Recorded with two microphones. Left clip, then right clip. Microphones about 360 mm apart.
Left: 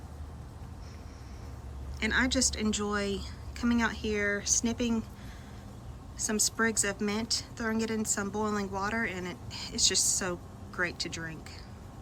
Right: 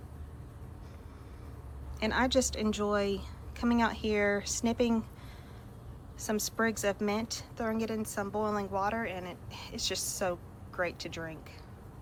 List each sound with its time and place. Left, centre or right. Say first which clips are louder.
2.0 s a woman's voice: even; centre
6.1 s a woman's voice: left 2 dB; centre